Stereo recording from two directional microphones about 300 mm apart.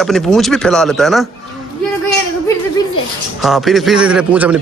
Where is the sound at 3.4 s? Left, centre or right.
Centre.